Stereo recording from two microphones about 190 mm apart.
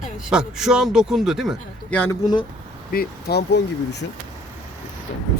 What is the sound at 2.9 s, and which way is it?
Speech, 55° left (ahead or behind).